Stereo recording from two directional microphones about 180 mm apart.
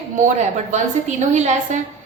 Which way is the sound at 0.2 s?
45° right (ahead or behind).